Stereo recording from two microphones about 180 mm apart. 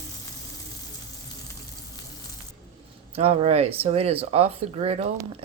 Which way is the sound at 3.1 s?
35° right (ahead or behind).